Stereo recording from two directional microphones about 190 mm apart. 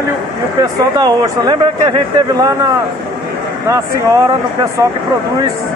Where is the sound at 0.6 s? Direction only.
20° right (ahead or behind).